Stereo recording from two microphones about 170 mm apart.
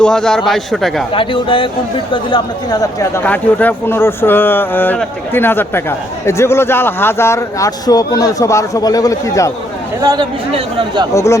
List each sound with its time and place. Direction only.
0.0 s a man's voice: 5° left (ahead or behind)
1.1 s speech: 30° left (ahead or behind)
3.2 s speech: 10° left (ahead or behind)
10.0 s speech: 20° right (ahead or behind)
11.1 s speech: 15° left (ahead or behind)